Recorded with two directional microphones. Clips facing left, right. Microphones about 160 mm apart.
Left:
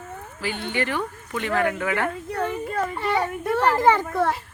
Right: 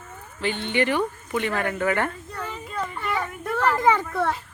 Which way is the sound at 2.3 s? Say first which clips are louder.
Left 8 dB; 60° left (ahead or behind).